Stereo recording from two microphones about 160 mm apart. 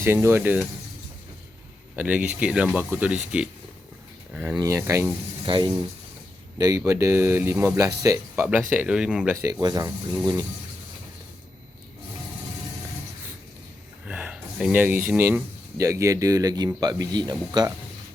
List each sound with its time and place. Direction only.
0.0 s speech: 15° right (ahead or behind)
2.0 s speech: 10° right (ahead or behind)
4.3 s speech: 10° right (ahead or behind)
5.5 s speech: 30° right (ahead or behind)
6.6 s speech: 20° right (ahead or behind)
8.7 s speech: 10° right (ahead or behind)
9.4 s speech: 25° right (ahead or behind)
14.0 s gasp: 10° right (ahead or behind)
15.8 s speech: 20° right (ahead or behind)